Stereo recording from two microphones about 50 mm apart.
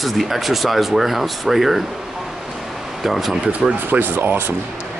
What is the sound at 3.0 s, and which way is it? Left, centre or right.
Speech, centre.